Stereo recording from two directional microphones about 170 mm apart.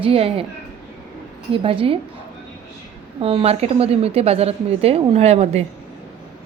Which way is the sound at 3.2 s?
35° right (ahead or behind).